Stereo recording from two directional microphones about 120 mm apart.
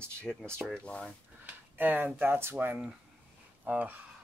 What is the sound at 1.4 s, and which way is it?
Speech, 15° right (ahead or behind).